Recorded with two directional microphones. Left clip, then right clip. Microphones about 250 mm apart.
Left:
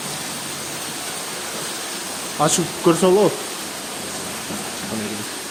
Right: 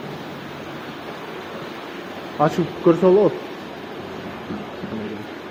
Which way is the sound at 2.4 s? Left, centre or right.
Centre.